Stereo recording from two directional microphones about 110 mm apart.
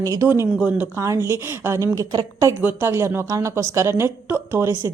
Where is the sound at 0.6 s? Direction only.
15° right (ahead or behind).